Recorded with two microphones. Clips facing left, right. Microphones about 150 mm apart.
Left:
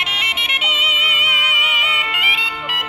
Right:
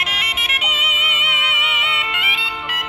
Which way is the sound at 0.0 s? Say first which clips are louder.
Even; centre (ahead or behind).